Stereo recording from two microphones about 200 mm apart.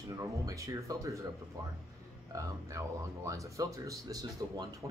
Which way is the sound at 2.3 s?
15° right (ahead or behind).